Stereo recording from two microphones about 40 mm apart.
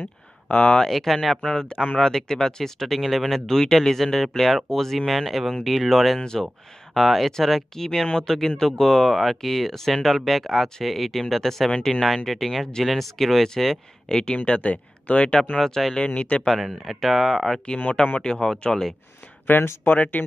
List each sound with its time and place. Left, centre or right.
0.5 s speech: left
0.8 s speech: centre
1.4 s speech: centre
3.0 s speech: centre
11.7 s speech: centre
12.3 s speech: centre
14.0 s speech: left
15.8 s speech: centre
16.2 s speech: left
16.6 s speech: centre
18.0 s speech: left
18.7 s speech: centre
19.4 s speech: left